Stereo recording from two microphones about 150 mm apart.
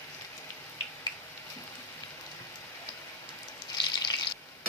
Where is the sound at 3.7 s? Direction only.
30° left (ahead or behind).